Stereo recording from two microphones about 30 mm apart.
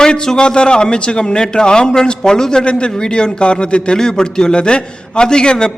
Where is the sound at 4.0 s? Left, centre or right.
Left.